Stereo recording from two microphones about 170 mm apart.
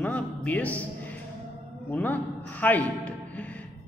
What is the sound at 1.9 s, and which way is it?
A man's voice, 10° left (ahead or behind).